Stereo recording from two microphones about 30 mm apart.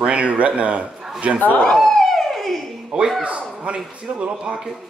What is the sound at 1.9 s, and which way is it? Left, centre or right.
Police car, centre.